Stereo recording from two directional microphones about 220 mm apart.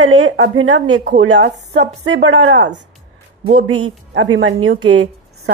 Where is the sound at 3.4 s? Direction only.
35° right (ahead or behind).